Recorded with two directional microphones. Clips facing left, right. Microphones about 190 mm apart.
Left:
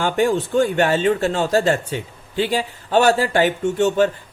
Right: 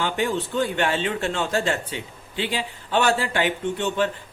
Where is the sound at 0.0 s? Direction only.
45° left (ahead or behind).